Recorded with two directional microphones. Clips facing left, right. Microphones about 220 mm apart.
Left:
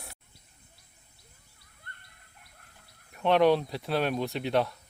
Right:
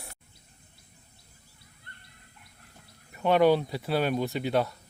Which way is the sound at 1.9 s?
50° left (ahead or behind).